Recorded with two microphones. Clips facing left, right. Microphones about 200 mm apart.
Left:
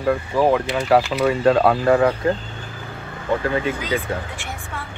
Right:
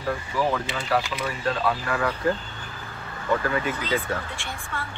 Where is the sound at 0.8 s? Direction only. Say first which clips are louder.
Left 10 dB; 65° left (ahead or behind).